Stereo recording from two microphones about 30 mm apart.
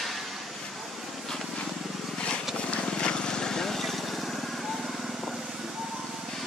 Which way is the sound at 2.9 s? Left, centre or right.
Left.